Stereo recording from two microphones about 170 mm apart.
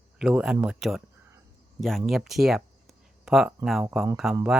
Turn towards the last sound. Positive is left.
turn(degrees=-5)  # may be behind; listen again after turning